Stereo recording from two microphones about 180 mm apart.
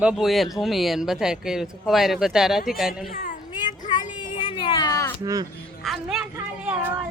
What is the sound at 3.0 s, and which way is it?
Speech, 50° left (ahead or behind).